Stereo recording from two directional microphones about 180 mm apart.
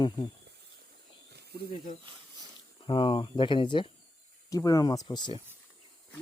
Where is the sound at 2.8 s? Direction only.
30° left (ahead or behind).